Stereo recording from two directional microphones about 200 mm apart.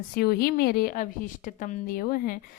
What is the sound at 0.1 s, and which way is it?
A woman's voice, 50° left (ahead or behind).